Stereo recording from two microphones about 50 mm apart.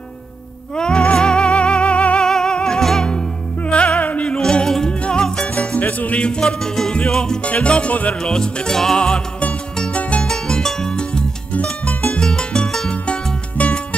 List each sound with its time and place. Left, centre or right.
0.7 s music: centre
2.2 s music: centre
3.1 s music: left
4.4 s music: centre
4.9 s music: left
5.5 s music: left
6.4 s music: centre
7.4 s music: left
8.2 s music: centre
10.2 s music: centre
12.9 s music: left